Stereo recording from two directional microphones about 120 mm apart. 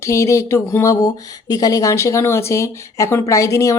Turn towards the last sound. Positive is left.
turn(degrees=25)  # may be behind; listen again after turning